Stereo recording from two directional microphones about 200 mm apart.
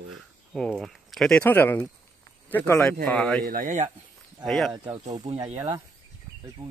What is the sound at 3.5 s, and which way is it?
Speech, 40° right (ahead or behind).